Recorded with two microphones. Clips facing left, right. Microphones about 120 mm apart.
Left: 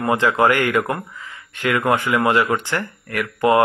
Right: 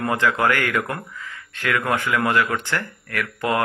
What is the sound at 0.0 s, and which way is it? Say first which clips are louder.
Speech: left 4 dB; 20° left (ahead or behind).